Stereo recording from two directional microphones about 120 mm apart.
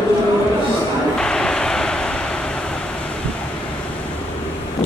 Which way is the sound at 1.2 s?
5° left (ahead or behind).